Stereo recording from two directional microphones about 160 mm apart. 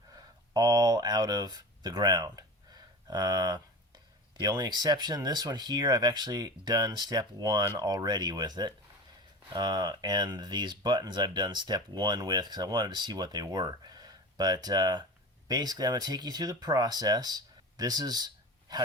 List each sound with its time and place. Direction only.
0.1 s speech: 25° right (ahead or behind)